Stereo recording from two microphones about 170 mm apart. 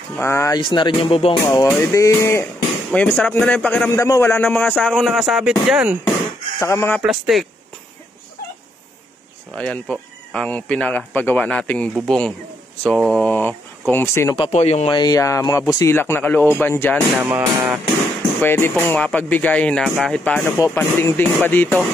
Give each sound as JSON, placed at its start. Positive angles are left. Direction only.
{"t": 0.1, "sound": "speech", "side_deg": 15}
{"t": 0.6, "sound": "speech", "side_deg": 25}
{"t": 1.4, "sound": "speech", "side_deg": 20}
{"t": 6.6, "sound": "speech", "side_deg": 15}
{"t": 7.0, "sound": "speech", "side_deg": -5}
{"t": 9.6, "sound": "speech", "side_deg": 5}
{"t": 14.4, "sound": "speech", "side_deg": 40}
{"t": 14.9, "sound": "speech", "side_deg": 25}
{"t": 17.2, "sound": "music", "side_deg": -15}
{"t": 18.4, "sound": "speech", "side_deg": 15}